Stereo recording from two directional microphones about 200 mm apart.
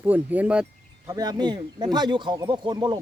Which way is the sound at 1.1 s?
20° right (ahead or behind).